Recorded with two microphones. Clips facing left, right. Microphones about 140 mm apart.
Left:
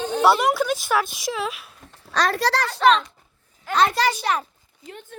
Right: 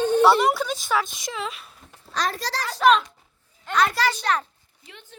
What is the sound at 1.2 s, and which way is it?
Speech, 5° left (ahead or behind).